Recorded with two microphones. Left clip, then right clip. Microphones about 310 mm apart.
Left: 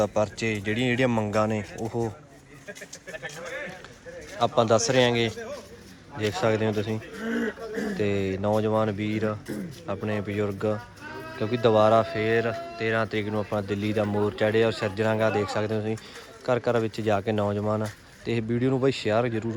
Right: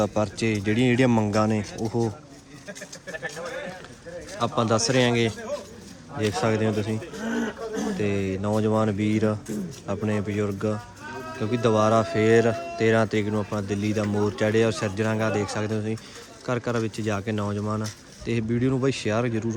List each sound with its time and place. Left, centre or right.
0.0 s speech: centre
4.4 s speech: centre
7.3 s a sound: right
7.9 s speech: centre